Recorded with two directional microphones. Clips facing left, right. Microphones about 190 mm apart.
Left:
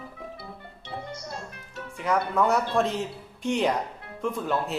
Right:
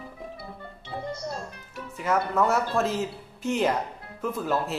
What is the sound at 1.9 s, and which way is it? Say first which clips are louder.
Speech: even; centre (ahead or behind).